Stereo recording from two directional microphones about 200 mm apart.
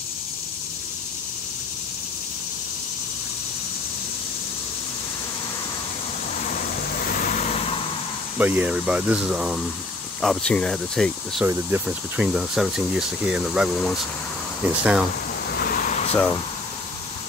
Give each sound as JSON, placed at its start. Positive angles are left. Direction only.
{"t": 7.1, "sound": "vehicle", "side_deg": 45}
{"t": 8.4, "sound": "speech", "side_deg": -10}
{"t": 15.5, "sound": "a sound", "side_deg": 45}